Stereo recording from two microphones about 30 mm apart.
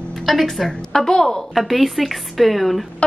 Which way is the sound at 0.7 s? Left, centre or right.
Centre.